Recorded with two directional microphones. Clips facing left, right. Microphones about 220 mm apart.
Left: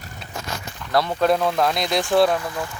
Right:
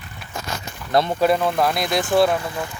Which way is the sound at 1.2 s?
5° right (ahead or behind).